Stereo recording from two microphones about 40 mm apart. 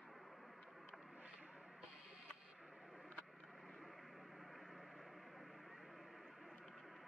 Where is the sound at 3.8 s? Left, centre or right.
Centre.